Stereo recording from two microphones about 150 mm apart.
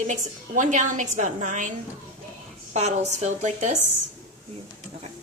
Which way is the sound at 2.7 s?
50° right (ahead or behind).